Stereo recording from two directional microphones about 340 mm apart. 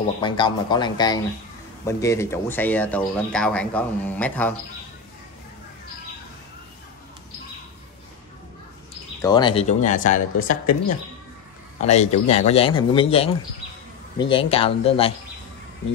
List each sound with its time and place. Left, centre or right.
0.2 s a man's voice: centre
9.2 s speech: centre
11.8 s a man's voice: centre
14.3 s a man's voice: centre